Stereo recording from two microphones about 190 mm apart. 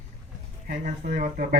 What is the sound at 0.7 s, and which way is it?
Speech, 45° right (ahead or behind).